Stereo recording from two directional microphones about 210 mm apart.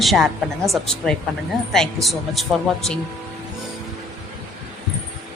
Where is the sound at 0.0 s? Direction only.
Centre (ahead or behind).